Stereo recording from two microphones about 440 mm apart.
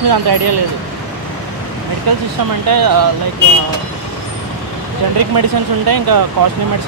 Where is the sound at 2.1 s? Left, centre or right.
Right.